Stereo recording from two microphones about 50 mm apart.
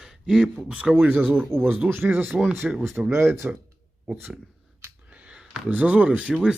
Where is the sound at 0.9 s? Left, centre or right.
Right.